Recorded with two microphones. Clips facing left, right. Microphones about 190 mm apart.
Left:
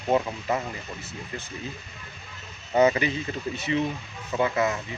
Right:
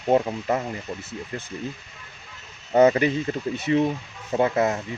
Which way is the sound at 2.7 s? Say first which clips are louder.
Right 4 dB; 50° right (ahead or behind).